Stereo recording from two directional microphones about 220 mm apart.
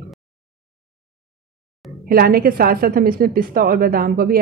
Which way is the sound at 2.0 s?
40° right (ahead or behind).